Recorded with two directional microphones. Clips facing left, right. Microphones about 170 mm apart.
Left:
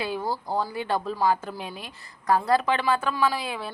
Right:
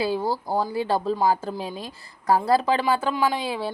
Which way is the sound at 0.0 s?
30° right (ahead or behind).